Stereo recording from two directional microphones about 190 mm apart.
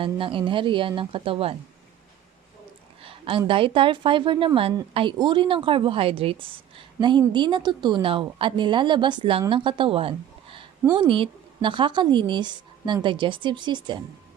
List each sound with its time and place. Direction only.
0.0 s a woman's voice: 25° right (ahead or behind)
3.0 s a woman's voice: 30° right (ahead or behind)